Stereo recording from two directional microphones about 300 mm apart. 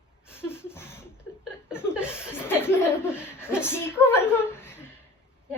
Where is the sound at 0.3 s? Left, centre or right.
Centre.